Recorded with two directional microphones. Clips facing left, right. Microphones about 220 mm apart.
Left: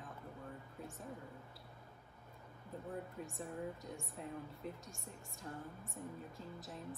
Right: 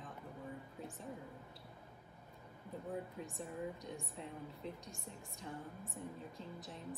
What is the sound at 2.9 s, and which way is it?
Speech, centre (ahead or behind).